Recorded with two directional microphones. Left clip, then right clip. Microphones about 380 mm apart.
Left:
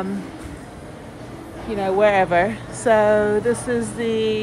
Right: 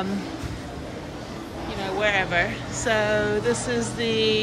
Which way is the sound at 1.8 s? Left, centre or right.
Centre.